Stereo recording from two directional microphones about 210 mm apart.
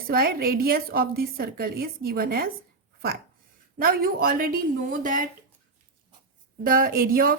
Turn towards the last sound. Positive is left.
turn(degrees=-45)  # may be behind; listen again after turning